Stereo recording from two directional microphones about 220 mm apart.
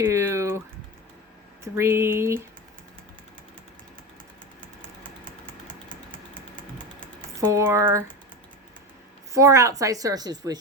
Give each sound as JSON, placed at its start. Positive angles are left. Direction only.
{"t": 0.0, "sound": "speech", "side_deg": -10}
{"t": 1.6, "sound": "a woman's voice", "side_deg": -10}
{"t": 5.5, "sound": "typing", "side_deg": 5}
{"t": 7.3, "sound": "a woman's voice", "side_deg": -10}
{"t": 9.3, "sound": "a woman's voice", "side_deg": -15}